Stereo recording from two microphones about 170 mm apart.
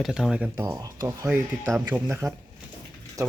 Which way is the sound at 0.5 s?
20° right (ahead or behind).